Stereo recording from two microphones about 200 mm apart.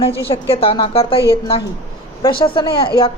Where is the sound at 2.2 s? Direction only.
25° left (ahead or behind).